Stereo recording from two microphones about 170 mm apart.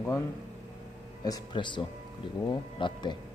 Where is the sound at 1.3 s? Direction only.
25° left (ahead or behind).